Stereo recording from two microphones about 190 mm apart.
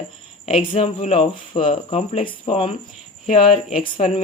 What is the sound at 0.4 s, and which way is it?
Speech, 30° left (ahead or behind).